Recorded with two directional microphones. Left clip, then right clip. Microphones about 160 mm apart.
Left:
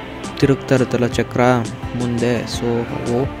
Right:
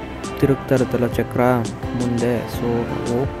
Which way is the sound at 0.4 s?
35° left (ahead or behind).